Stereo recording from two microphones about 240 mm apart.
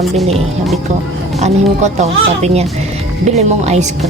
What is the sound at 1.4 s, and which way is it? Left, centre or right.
Speech, right.